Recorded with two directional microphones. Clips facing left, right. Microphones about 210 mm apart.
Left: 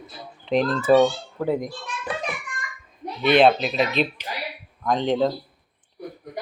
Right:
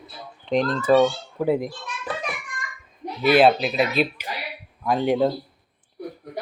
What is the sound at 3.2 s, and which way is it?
A child's voice, 5° right (ahead or behind).